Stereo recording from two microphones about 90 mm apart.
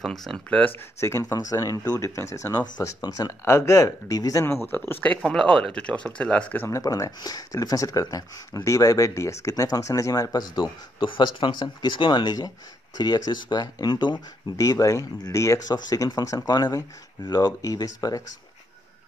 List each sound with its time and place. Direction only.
0.0 s speech: 5° left (ahead or behind)
1.0 s speech: 35° left (ahead or behind)
4.6 s speech: 20° left (ahead or behind)
5.2 s speech: 5° left (ahead or behind)
6.7 s speech: 40° left (ahead or behind)
11.1 s speech: 65° left (ahead or behind)
14.6 s speech: 40° left (ahead or behind)
16.5 s speech: 50° left (ahead or behind)